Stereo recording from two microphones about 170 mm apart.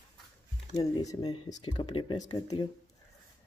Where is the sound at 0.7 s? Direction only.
20° left (ahead or behind).